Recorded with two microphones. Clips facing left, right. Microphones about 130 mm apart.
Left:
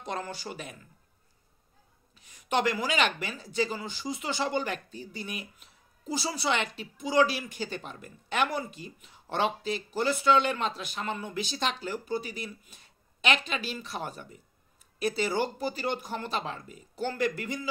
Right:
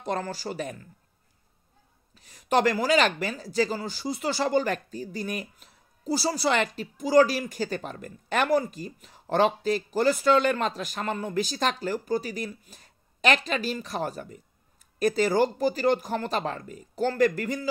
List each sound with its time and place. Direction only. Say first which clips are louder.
0.0 s speech: right 5 dB; 40° right (ahead or behind)
2.1 s speech: right 5 dB; 40° right (ahead or behind)